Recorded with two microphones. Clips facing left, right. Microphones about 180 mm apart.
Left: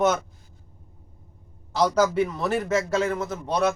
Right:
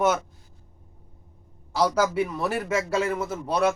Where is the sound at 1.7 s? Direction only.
10° right (ahead or behind).